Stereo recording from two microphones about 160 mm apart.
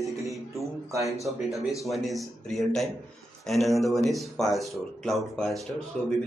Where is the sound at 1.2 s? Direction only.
Centre (ahead or behind).